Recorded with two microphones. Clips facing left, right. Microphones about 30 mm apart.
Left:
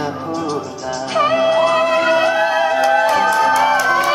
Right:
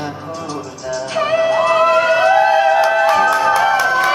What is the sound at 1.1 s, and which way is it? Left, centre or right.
Music, centre.